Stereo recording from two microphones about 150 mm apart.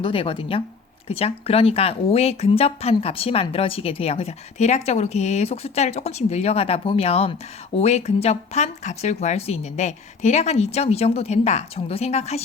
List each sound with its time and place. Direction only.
0.0 s speech: 35° left (ahead or behind)